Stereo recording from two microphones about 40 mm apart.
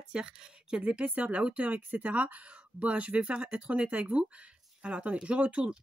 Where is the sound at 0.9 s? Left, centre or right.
Right.